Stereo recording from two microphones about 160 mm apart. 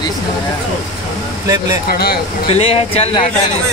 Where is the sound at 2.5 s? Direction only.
35° left (ahead or behind).